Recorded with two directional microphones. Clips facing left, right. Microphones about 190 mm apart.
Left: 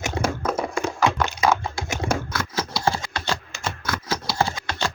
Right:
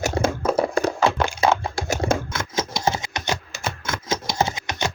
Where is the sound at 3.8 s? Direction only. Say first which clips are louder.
Right 1 dB; 25° right (ahead or behind).